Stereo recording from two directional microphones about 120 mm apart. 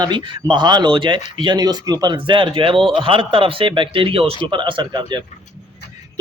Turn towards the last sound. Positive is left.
turn(degrees=-40)  # may be behind; listen again after turning